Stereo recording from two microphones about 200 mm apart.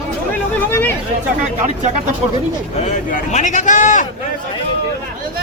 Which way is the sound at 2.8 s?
35° left (ahead or behind).